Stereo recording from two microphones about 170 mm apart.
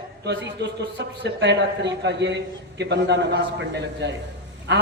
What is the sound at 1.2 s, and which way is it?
A man's voice, 90° right.